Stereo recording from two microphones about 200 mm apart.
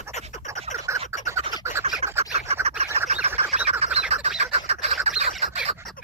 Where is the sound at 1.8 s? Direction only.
30° right (ahead or behind).